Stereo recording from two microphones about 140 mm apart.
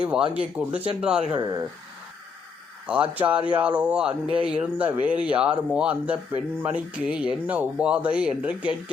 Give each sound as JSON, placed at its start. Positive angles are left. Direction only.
{"t": 0.0, "sound": "speech", "side_deg": -5}
{"t": 1.4, "sound": "speech", "side_deg": -25}
{"t": 2.8, "sound": "speech", "side_deg": -10}